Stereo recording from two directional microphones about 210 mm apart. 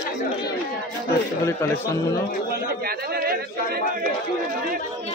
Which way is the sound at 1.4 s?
15° left (ahead or behind).